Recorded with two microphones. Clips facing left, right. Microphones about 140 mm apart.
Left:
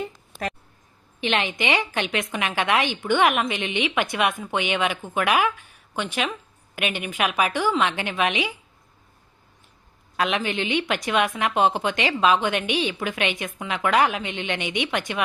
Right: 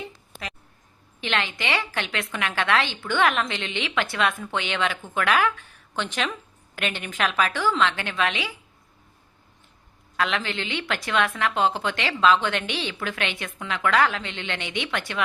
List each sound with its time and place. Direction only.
0.0 s a sound: 45° left (ahead or behind)
1.2 s a woman's voice: 20° left (ahead or behind)
10.2 s a woman's voice: 15° left (ahead or behind)